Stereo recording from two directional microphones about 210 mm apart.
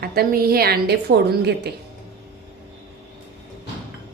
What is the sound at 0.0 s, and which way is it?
A woman's voice, 50° right (ahead or behind).